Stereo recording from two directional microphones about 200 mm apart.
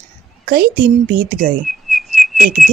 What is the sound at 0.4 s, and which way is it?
A woman's voice, 45° right (ahead or behind).